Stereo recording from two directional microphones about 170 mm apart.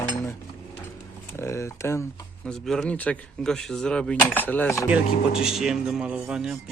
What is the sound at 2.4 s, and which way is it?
Speech, 5° left (ahead or behind).